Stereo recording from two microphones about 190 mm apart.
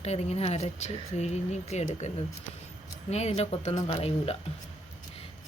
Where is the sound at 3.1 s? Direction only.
35° left (ahead or behind).